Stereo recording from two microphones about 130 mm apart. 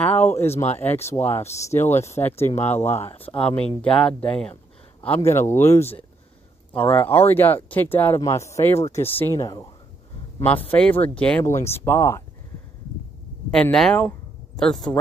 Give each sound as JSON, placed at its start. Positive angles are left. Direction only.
{"t": 0.0, "sound": "speech", "side_deg": 15}
{"t": 0.5, "sound": "speech", "side_deg": 60}
{"t": 1.1, "sound": "speech", "side_deg": 20}
{"t": 2.4, "sound": "speech", "side_deg": 60}
{"t": 2.7, "sound": "speech", "side_deg": 15}
{"t": 3.3, "sound": "speech", "side_deg": 50}
{"t": 3.8, "sound": "speech", "side_deg": 5}
{"t": 8.7, "sound": "speech", "side_deg": 55}
{"t": 9.1, "sound": "speech", "side_deg": 20}
{"t": 10.7, "sound": "speech", "side_deg": 15}
{"t": 13.5, "sound": "speech", "side_deg": 5}